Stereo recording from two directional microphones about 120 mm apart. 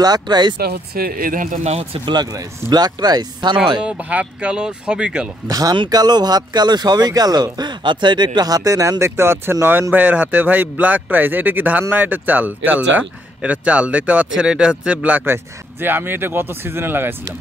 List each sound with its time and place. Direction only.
0.0 s speech: 35° right (ahead or behind)
1.4 s speech: 80° right
2.3 s speech: 35° right (ahead or behind)
3.8 s speech: 10° right (ahead or behind)
5.5 s speech: 30° right (ahead or behind)